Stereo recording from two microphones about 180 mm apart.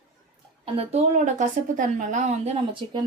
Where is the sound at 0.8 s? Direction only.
35° right (ahead or behind).